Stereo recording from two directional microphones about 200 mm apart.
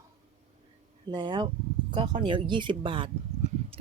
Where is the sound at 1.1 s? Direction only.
20° right (ahead or behind).